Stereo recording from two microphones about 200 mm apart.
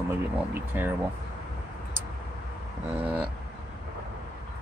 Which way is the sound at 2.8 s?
5° right (ahead or behind).